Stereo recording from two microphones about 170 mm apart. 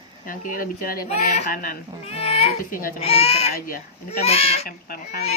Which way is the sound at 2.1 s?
35° left (ahead or behind).